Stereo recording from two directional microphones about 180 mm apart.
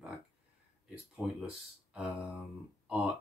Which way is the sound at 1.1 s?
5° right (ahead or behind).